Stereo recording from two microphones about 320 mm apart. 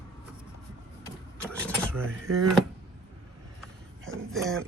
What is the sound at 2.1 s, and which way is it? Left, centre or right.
Drawer open or close, right.